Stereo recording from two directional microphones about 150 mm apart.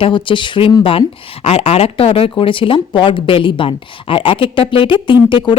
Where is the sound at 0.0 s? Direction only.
35° left (ahead or behind).